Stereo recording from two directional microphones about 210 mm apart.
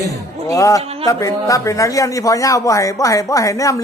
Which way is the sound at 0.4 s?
15° left (ahead or behind).